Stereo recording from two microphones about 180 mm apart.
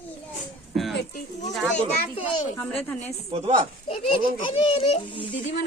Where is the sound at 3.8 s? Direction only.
35° left (ahead or behind).